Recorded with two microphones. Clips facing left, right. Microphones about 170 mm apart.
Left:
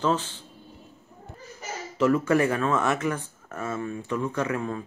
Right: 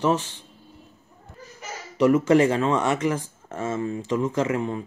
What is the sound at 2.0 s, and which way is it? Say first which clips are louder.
Speech: right 4 dB; 20° right (ahead or behind).